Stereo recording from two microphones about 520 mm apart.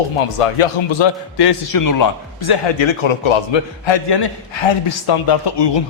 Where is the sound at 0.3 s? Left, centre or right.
Left.